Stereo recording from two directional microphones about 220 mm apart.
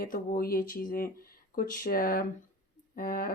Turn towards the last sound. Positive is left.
turn(degrees=40)  # may be behind; listen again after turning